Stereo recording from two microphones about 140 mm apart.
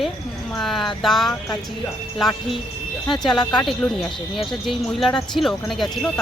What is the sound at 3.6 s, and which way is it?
Speech, centre (ahead or behind).